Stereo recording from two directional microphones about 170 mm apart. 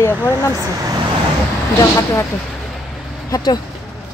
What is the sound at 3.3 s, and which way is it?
Speech, 25° left (ahead or behind).